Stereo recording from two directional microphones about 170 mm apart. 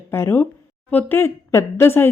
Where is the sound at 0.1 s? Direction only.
15° left (ahead or behind).